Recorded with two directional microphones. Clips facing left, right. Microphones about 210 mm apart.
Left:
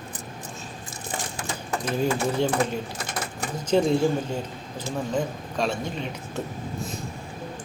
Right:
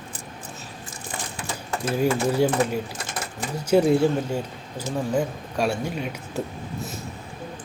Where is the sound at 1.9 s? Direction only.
10° right (ahead or behind).